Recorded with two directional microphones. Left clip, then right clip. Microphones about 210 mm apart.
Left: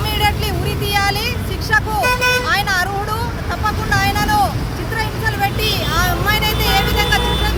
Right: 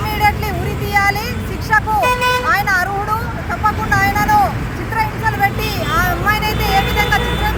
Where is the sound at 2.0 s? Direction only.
50° right (ahead or behind).